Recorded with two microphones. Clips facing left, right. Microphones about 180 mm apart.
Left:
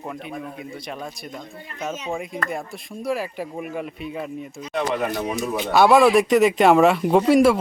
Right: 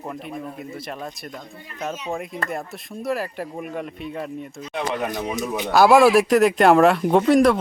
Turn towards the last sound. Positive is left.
turn(degrees=5)  # may be behind; listen again after turning